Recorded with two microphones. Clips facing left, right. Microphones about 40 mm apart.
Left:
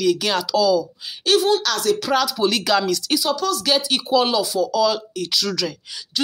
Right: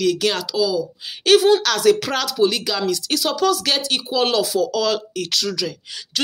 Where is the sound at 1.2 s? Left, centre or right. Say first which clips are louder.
Right 4 dB; right.